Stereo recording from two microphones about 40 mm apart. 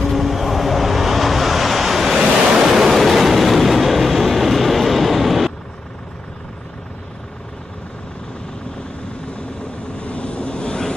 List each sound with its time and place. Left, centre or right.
0.0 s vehicle: centre
2.1 s waves: centre
9.9 s vehicle: left